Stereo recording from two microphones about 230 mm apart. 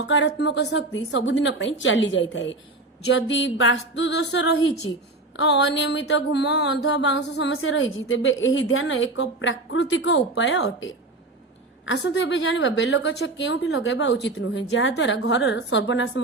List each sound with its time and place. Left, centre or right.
0.1 s a woman's voice: left